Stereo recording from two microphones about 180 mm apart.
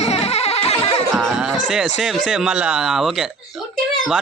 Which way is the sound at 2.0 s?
Centre (ahead or behind).